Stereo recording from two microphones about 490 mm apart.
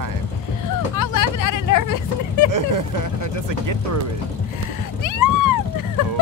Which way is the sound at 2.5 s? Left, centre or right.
Right.